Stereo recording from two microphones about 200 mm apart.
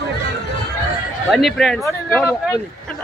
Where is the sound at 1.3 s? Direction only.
Centre (ahead or behind).